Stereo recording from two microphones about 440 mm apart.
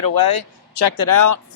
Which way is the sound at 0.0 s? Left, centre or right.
Left.